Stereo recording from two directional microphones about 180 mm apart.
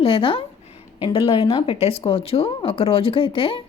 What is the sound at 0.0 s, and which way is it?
Speech, 30° left (ahead or behind).